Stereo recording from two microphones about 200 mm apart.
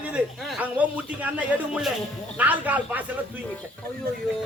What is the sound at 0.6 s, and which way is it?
A man's voice, 10° right (ahead or behind).